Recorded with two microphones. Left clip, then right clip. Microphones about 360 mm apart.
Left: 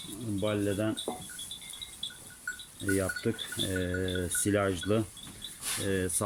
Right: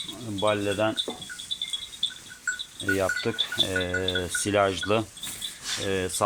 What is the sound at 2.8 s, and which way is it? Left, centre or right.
Speech, right.